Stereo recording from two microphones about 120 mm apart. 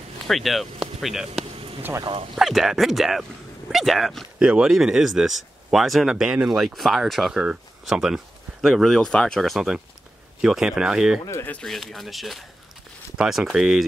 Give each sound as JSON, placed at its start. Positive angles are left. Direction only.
{"t": 0.3, "sound": "speech", "side_deg": 0}
{"t": 1.5, "sound": "a sound", "side_deg": -50}
{"t": 1.8, "sound": "speech", "side_deg": -15}
{"t": 2.3, "sound": "speech", "side_deg": 0}
{"t": 11.2, "sound": "speech", "side_deg": 20}
{"t": 11.5, "sound": "speech", "side_deg": 0}